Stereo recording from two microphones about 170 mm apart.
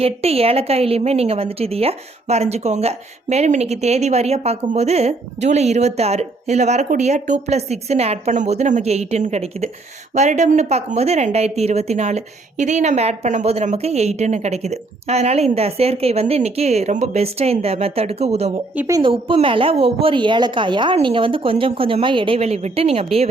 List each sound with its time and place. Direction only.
0.0 s a woman's voice: 35° right (ahead or behind)
18.8 s a woman's voice: 20° right (ahead or behind)
19.1 s a woman's voice: 30° right (ahead or behind)